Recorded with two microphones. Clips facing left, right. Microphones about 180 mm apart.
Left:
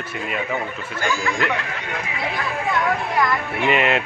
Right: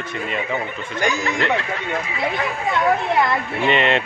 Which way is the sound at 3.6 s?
5° left (ahead or behind).